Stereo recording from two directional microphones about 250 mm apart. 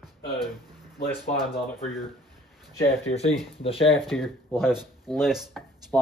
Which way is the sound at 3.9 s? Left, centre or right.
Centre.